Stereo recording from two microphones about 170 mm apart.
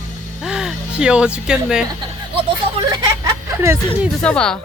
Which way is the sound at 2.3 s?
25° right (ahead or behind).